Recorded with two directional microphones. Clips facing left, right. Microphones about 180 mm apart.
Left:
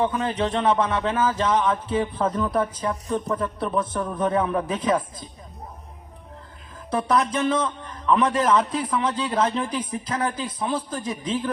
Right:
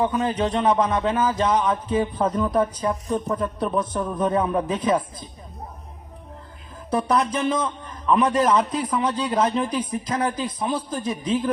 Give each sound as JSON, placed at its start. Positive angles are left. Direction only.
{"t": 0.0, "sound": "a man's voice", "side_deg": -15}
{"t": 6.9, "sound": "a man's voice", "side_deg": -10}